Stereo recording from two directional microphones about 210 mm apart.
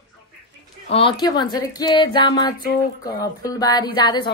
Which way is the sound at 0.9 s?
25° left (ahead or behind).